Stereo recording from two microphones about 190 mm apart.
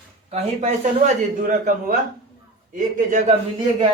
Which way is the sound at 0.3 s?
35° right (ahead or behind).